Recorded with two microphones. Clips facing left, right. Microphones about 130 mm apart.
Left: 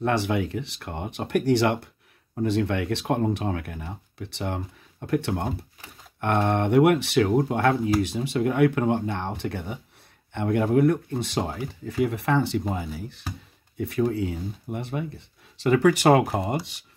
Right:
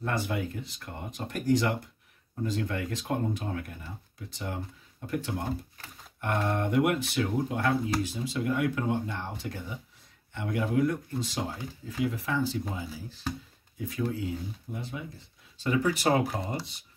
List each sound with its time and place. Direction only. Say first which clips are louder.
0.0 s speech: left 7 dB; 75° left (ahead or behind)